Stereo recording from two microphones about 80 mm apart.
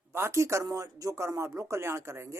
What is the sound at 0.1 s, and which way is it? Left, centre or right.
Speech, right.